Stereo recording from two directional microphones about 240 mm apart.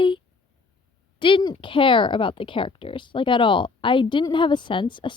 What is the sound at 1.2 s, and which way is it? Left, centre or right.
Speech, centre.